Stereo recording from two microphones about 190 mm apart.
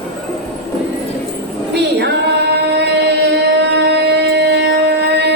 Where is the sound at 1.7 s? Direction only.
60° right (ahead or behind).